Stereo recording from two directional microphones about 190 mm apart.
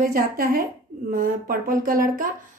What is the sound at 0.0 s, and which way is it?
Speech, 50° right (ahead or behind).